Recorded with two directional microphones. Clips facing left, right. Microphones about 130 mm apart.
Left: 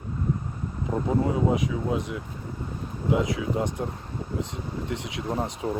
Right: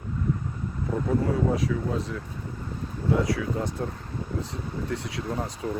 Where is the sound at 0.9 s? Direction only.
15° left (ahead or behind).